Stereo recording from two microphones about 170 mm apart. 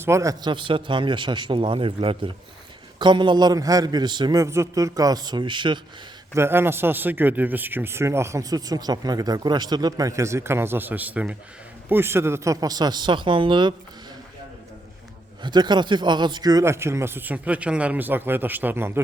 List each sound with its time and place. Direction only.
0.0 s a man's voice: 15° right (ahead or behind)
6.3 s a man's voice: 15° right (ahead or behind)
15.4 s a man's voice: 25° right (ahead or behind)